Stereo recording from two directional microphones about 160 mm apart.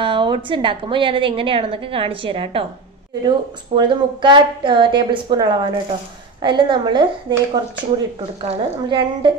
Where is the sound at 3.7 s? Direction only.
30° right (ahead or behind).